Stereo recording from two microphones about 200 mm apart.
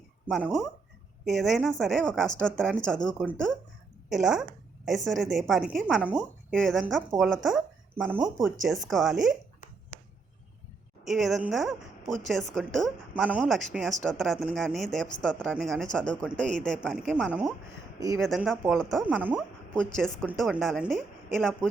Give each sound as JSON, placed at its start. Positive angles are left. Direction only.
{"t": 0.3, "sound": "a woman's voice", "side_deg": 0}
{"t": 9.1, "sound": "speech", "side_deg": -40}
{"t": 11.0, "sound": "a woman's voice", "side_deg": 0}